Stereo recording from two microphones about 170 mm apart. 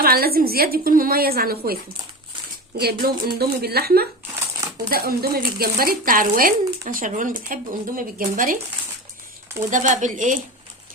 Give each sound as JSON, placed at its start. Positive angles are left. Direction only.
{"t": 0.0, "sound": "speech", "side_deg": -65}
{"t": 3.0, "sound": "speech", "side_deg": -65}
{"t": 9.6, "sound": "speech", "side_deg": -50}